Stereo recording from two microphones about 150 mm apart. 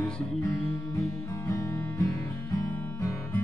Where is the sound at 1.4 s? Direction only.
20° left (ahead or behind).